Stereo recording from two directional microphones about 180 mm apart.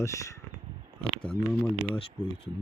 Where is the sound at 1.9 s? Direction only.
30° left (ahead or behind).